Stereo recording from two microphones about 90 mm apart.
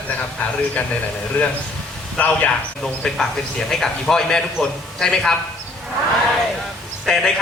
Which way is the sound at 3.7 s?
5° left (ahead or behind).